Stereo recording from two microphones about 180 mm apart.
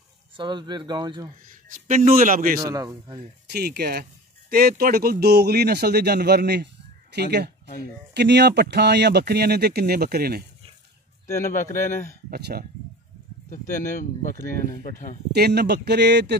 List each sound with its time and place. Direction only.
0.4 s speech: 25° right (ahead or behind)
1.5 s a sound: 50° right (ahead or behind)
2.1 s a man's voice: 50° right (ahead or behind)
2.6 s speech: 20° right (ahead or behind)
3.4 s speech: 60° right (ahead or behind)
11.5 s speech: 45° left (ahead or behind)
12.3 s speech: 60° right (ahead or behind)
13.5 s speech: 45° left (ahead or behind)
15.3 s speech: 65° right (ahead or behind)